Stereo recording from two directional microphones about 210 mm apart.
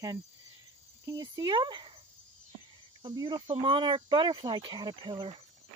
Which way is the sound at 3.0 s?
20° right (ahead or behind).